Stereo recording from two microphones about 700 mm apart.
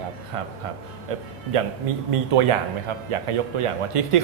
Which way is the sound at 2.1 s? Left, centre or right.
Right.